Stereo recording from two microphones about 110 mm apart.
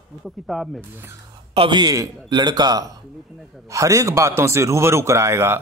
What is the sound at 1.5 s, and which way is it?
Speech, 55° right (ahead or behind).